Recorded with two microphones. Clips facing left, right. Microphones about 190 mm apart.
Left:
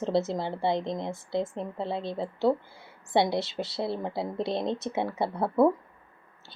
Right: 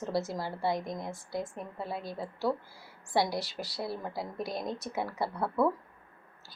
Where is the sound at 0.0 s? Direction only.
25° left (ahead or behind).